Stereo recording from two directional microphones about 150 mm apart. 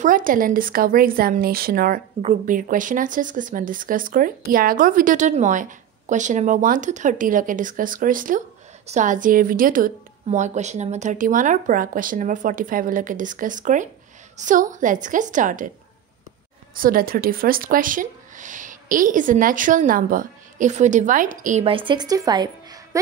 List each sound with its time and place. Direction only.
0.0 s speech: 65° right (ahead or behind); by 2.0 s 80° right
2.2 s speech: 65° right (ahead or behind)
16.7 s speech: 70° right (ahead or behind)
21.6 s a woman's voice: 35° right (ahead or behind)